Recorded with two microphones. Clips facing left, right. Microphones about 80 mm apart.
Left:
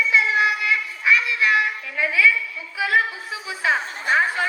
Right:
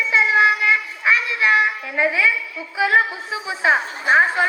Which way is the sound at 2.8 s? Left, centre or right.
Right.